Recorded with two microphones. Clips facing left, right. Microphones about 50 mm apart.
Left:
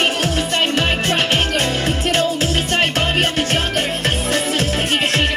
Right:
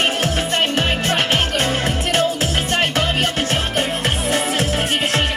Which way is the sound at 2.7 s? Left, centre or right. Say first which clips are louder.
Even; left.